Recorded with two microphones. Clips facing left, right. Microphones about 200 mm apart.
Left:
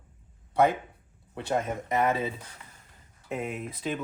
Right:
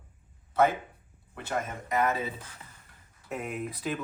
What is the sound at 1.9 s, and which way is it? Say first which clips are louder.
Speech: left 1 dB; 25° left (ahead or behind).